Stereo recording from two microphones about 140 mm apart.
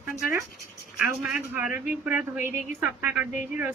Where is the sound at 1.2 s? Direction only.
15° right (ahead or behind).